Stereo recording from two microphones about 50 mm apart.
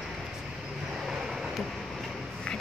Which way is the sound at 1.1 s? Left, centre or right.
Centre.